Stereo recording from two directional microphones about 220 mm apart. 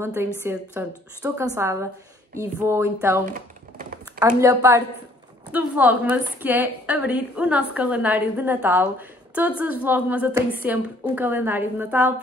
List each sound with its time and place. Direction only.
0.0 s a woman's voice: 10° right (ahead or behind)
3.3 s typing: 35° right (ahead or behind)
4.4 s a woman's voice: 15° right (ahead or behind)